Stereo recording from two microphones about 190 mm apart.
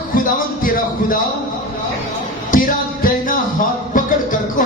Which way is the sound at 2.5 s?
45° left (ahead or behind).